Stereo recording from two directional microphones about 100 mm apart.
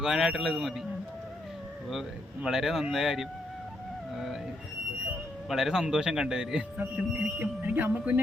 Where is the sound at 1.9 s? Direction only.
5° right (ahead or behind).